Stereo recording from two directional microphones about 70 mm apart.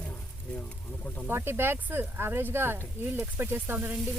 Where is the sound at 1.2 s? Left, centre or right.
Right.